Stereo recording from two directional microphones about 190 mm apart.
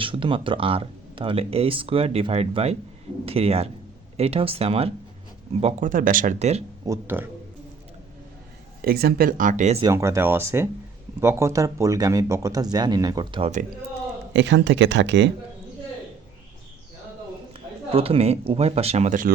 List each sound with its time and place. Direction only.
0.0 s speech: 25° right (ahead or behind)
6.8 s speech: 15° right (ahead or behind)
8.8 s speech: 55° right (ahead or behind)
9.8 s speech: 15° right (ahead or behind)
14.3 s speech: 70° right (ahead or behind)
17.9 s speech: 30° right (ahead or behind)